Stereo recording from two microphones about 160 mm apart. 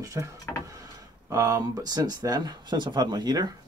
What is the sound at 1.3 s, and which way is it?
Speech, 20° right (ahead or behind).